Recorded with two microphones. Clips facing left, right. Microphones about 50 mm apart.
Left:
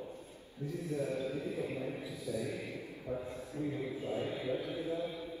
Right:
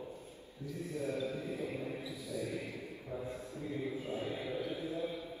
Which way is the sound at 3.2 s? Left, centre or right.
Left.